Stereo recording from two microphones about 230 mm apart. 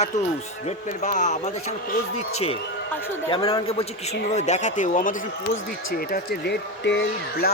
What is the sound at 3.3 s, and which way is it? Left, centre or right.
A man's voice, left.